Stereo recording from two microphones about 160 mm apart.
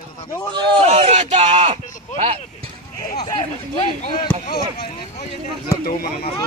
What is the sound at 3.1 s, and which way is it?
Speech, 30° left (ahead or behind).